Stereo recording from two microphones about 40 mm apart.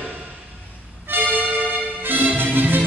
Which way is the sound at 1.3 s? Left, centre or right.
Right.